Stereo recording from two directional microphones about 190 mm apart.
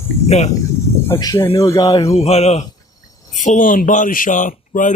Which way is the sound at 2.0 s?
35° left (ahead or behind).